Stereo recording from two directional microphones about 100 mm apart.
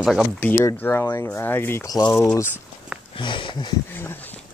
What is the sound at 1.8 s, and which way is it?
Speech, 40° left (ahead or behind).